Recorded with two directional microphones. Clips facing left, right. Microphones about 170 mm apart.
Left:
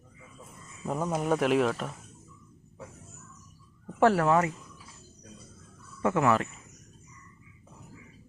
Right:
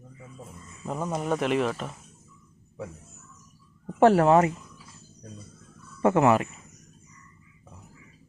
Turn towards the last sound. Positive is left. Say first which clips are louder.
# right 4 dB
turn(degrees=-25)  # may be behind; listen again after turning